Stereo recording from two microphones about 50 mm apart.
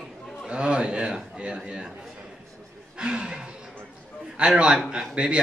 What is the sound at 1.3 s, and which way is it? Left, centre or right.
Speech, right.